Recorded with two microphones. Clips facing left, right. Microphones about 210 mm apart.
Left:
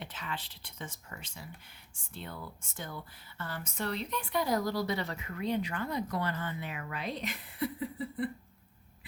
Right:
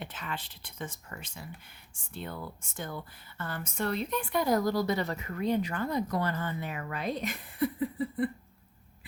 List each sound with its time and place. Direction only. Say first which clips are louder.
0.0 s speech: right 2 dB; 50° right (ahead or behind)